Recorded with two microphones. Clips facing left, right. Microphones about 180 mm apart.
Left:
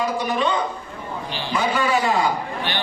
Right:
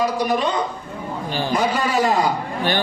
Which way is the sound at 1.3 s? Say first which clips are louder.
Right 3 dB; 45° right (ahead or behind).